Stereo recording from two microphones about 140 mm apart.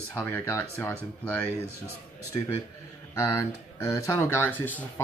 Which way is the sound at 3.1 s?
20° left (ahead or behind).